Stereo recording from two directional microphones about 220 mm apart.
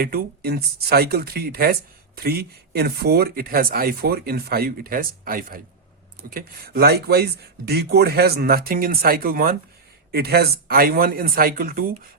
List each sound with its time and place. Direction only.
0.0 s speech: 45° right (ahead or behind)